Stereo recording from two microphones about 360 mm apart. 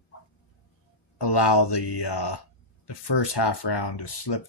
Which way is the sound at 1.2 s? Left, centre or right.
Left.